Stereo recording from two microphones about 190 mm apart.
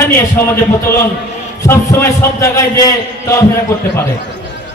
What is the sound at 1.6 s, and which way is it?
A man's voice, 15° left (ahead or behind).